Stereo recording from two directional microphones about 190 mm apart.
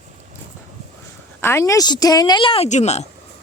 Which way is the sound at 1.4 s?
15° left (ahead or behind).